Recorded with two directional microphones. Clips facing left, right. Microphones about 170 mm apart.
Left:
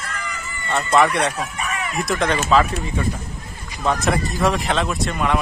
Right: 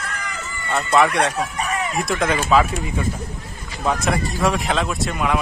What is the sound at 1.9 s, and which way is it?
Speech, centre (ahead or behind).